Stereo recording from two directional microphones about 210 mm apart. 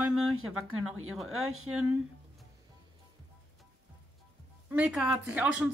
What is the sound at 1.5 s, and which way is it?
Speech, 90° right.